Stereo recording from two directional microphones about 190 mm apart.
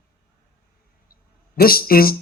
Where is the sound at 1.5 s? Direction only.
50° left (ahead or behind).